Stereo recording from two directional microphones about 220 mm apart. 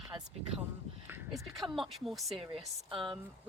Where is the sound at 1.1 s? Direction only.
5° right (ahead or behind).